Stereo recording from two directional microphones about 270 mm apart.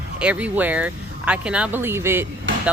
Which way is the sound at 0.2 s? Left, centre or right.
Centre.